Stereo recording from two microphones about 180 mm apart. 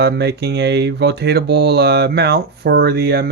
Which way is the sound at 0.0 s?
65° right (ahead or behind).